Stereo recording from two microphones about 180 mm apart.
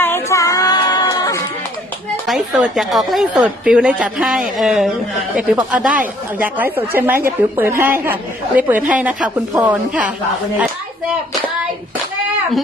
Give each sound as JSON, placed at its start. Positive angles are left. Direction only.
{"t": 0.0, "sound": "music", "side_deg": 15}
{"t": 2.2, "sound": "a woman's voice", "side_deg": 0}